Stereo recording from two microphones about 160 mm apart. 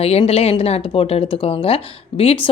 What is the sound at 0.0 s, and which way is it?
Speech, 40° left (ahead or behind).